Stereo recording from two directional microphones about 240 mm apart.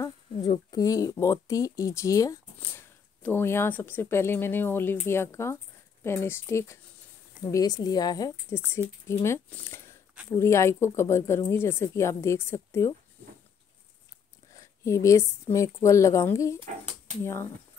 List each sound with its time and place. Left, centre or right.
0.0 s speech: centre
14.5 s a sound: centre
15.5 s speech: centre